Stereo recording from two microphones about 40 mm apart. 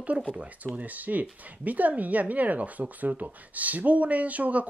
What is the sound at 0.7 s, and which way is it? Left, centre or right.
Speech, right.